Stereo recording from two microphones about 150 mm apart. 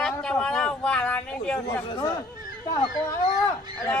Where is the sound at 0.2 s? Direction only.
5° left (ahead or behind).